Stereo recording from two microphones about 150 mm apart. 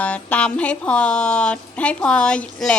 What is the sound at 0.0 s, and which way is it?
A woman's voice, 10° left (ahead or behind).